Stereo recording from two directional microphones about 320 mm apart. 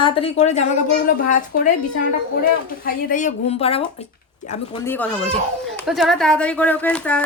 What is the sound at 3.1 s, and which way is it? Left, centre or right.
Speech, left.